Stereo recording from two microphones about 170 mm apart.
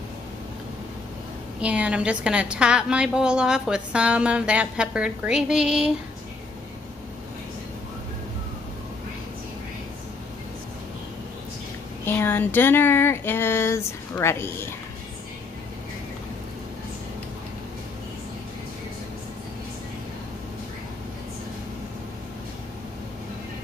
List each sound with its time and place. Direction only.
1.6 s a woman's voice: 5° right (ahead or behind)
12.0 s speech: 10° left (ahead or behind)